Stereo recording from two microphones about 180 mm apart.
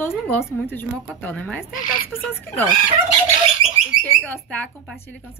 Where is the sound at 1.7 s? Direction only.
45° left (ahead or behind).